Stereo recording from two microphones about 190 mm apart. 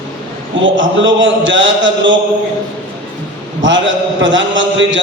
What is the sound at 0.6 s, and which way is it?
Speech, 80° right.